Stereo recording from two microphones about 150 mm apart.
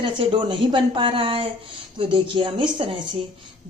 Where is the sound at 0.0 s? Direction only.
35° right (ahead or behind).